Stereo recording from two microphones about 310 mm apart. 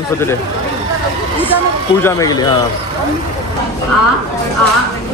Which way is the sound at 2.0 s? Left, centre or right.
Centre.